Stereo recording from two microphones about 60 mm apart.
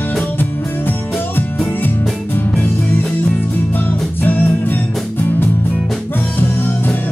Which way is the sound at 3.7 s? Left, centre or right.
Left.